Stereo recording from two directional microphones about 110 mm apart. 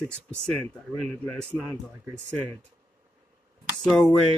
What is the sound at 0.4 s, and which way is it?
Speech, 5° left (ahead or behind).